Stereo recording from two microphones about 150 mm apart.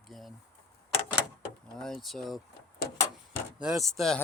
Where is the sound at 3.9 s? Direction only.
5° left (ahead or behind).